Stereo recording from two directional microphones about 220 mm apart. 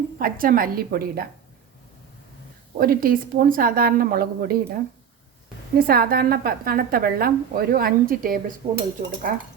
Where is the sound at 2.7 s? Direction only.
40° right (ahead or behind).